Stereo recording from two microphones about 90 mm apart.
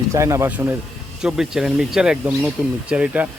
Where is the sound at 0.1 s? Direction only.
35° right (ahead or behind).